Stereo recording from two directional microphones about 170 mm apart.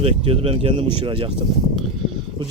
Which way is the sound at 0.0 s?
35° right (ahead or behind).